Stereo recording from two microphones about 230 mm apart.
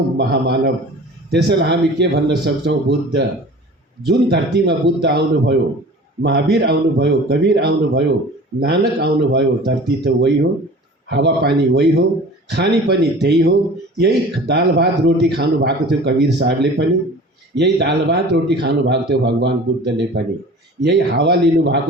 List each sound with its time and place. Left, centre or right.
0.2 s speech: right